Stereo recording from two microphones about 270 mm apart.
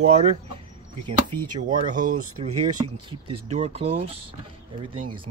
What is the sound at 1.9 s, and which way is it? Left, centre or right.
Speech, right.